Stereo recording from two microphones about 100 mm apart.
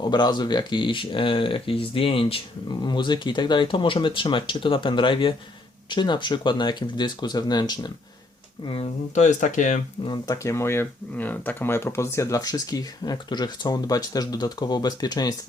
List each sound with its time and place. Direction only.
0.0 s speech: 45° left (ahead or behind); by 2.4 s 65° left (ahead or behind)
2.6 s speech: 50° left (ahead or behind)
8.6 s speech: 70° left (ahead or behind)
10.2 s speech: 30° left (ahead or behind)